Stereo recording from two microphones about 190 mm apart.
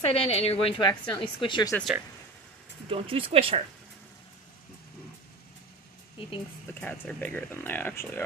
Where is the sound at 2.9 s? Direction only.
30° right (ahead or behind).